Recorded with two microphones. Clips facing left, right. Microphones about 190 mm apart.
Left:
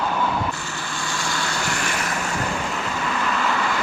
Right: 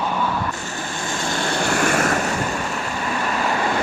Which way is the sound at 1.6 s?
50° right (ahead or behind).